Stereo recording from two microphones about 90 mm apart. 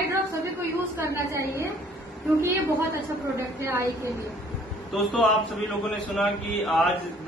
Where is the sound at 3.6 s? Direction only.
30° right (ahead or behind).